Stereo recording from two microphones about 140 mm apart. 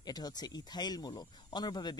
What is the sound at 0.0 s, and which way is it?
Speech, 30° left (ahead or behind).